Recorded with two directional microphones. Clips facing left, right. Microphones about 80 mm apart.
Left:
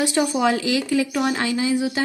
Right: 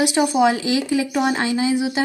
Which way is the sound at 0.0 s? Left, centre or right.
Centre.